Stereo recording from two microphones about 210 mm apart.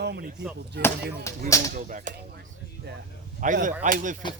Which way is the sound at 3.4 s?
35° right (ahead or behind).